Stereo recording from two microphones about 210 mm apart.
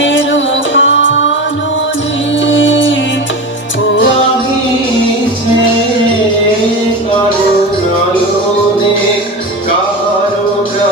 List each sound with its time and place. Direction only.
0.0 s music: 60° left (ahead or behind)
2.5 s music: 60° left (ahead or behind)